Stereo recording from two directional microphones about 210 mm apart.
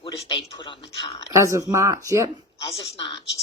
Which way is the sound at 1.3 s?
15° right (ahead or behind).